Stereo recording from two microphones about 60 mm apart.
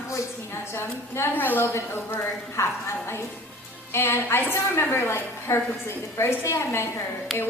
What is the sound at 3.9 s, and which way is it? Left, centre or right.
A woman's voice, left.